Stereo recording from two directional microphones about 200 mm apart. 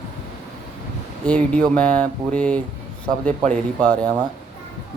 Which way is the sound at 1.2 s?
5° left (ahead or behind).